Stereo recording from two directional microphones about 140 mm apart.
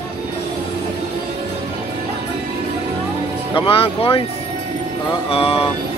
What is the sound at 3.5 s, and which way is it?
Speech, 40° left (ahead or behind).